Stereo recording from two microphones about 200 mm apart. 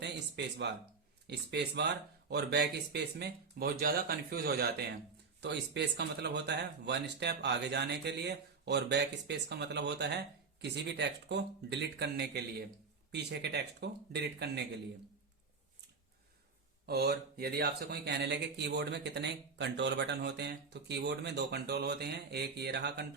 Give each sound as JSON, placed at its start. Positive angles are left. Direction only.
{"t": 0.0, "sound": "a sound", "side_deg": -60}
{"t": 1.3, "sound": "speech", "side_deg": -60}
{"t": 16.8, "sound": "speech", "side_deg": -50}